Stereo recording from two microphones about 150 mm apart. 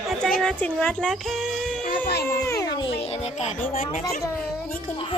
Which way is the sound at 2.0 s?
85° left.